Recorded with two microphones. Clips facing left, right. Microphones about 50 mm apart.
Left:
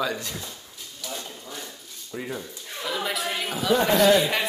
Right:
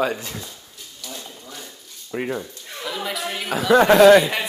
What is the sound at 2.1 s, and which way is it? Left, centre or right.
Speech, right.